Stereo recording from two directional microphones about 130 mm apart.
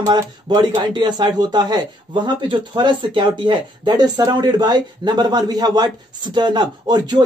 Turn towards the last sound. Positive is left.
turn(degrees=-35)  # may be behind; listen again after turning